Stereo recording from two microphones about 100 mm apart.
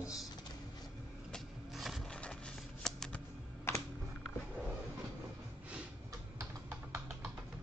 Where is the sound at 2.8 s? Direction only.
5° left (ahead or behind).